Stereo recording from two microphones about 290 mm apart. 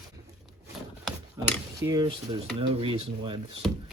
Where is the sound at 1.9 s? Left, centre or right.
Centre.